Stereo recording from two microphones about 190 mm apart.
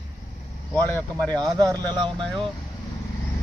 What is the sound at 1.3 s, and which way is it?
Speech, 20° right (ahead or behind).